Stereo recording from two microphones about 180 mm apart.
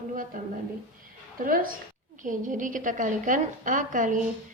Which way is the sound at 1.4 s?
50° right (ahead or behind).